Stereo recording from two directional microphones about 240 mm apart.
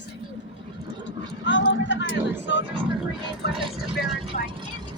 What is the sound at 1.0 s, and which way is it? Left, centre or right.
Vehicle, left.